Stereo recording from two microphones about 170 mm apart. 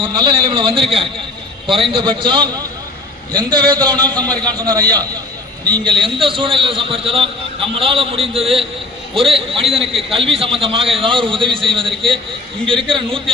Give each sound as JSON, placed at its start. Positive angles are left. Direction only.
{"t": 0.0, "sound": "a man's voice", "side_deg": -30}